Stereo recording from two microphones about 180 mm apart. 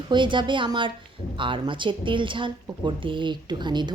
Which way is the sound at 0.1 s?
25° right (ahead or behind).